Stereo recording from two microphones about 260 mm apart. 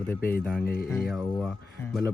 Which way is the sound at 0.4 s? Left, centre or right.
Centre.